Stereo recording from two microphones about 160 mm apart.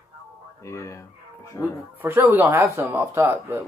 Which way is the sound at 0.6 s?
20° left (ahead or behind).